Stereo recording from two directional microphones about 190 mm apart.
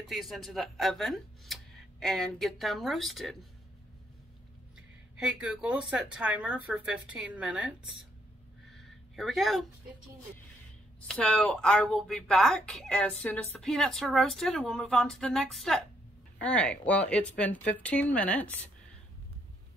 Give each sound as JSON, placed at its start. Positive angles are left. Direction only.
{"t": 0.0, "sound": "speech", "side_deg": 0}
{"t": 5.4, "sound": "speech", "side_deg": -5}
{"t": 8.6, "sound": "a sound", "side_deg": 0}
{"t": 11.0, "sound": "speech", "side_deg": 5}